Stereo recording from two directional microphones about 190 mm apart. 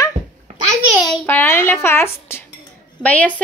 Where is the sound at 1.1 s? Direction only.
10° left (ahead or behind).